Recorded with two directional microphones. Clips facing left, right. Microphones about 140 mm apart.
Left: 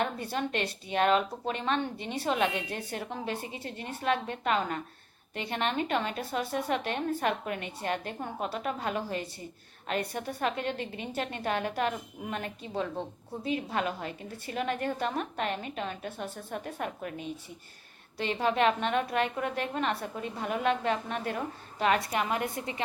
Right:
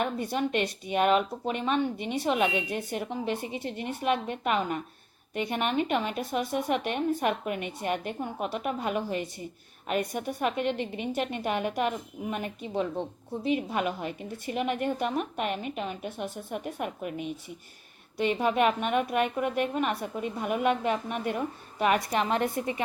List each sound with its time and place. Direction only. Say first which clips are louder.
0.0 s a woman's voice: right 3 dB; 15° right (ahead or behind)